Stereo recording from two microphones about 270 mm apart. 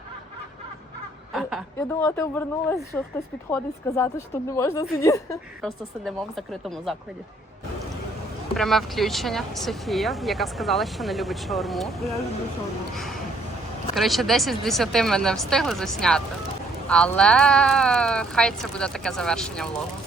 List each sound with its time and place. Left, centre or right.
1.3 s a sound: centre
2.0 s a woman's voice: centre
6.1 s speech: centre
8.5 s speech: centre